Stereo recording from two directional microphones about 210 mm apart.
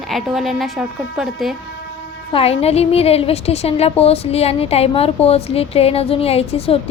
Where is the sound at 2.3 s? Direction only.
30° left (ahead or behind).